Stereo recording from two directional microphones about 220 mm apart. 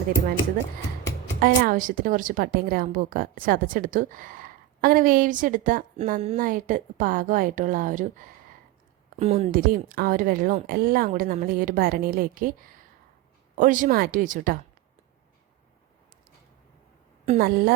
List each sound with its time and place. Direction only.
1.4 s a woman's voice: 40° right (ahead or behind)
17.2 s a woman's voice: 40° right (ahead or behind)